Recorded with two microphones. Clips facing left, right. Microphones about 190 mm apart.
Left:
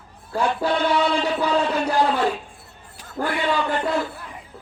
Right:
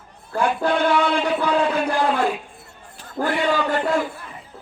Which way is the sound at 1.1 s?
55° right (ahead or behind).